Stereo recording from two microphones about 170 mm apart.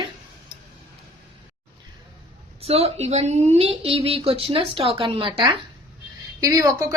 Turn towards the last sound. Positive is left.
turn(degrees=-20)  # may be behind; listen again after turning